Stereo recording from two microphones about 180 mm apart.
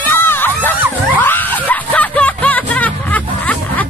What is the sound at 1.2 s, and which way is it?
Music, 10° left (ahead or behind).